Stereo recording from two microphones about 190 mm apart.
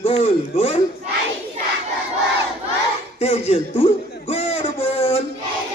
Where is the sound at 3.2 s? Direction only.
30° left (ahead or behind).